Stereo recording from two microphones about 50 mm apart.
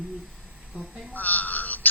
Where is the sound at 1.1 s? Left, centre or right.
Left.